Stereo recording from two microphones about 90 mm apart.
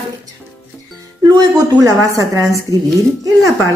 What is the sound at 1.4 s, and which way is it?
A woman's voice, 40° right (ahead or behind).